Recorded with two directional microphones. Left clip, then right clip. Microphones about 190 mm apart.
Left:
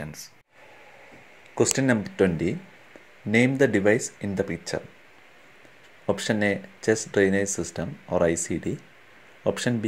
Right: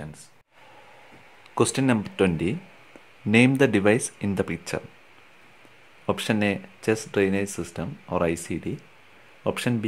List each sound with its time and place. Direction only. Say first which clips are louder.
1.5 s speech: even; 10° right (ahead or behind)
6.0 s speech: even; 10° right (ahead or behind)